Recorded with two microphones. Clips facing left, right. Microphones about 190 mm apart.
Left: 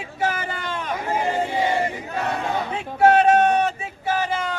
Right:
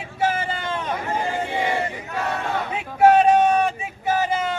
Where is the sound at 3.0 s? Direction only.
15° right (ahead or behind).